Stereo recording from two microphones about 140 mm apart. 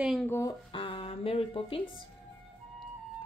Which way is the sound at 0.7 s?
40° left (ahead or behind).